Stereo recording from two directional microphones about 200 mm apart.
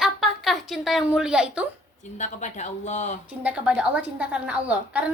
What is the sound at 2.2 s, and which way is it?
Speech, 35° left (ahead or behind).